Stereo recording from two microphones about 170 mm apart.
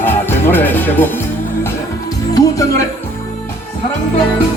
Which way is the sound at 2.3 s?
20° left (ahead or behind).